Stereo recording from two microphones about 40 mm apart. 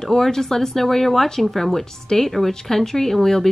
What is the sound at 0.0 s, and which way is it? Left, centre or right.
Speech, centre.